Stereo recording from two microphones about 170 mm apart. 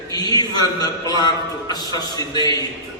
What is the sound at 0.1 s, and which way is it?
A man's voice, 25° left (ahead or behind).